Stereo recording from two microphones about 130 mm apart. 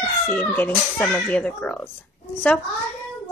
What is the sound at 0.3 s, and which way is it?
A woman's voice, 15° left (ahead or behind).